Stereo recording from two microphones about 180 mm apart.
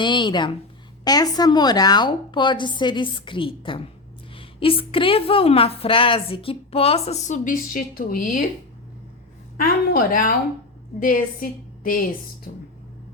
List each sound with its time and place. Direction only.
0.0 s a woman's voice: 25° left (ahead or behind); by 8.4 s 50° left (ahead or behind)
9.6 s a woman's voice: 50° left (ahead or behind)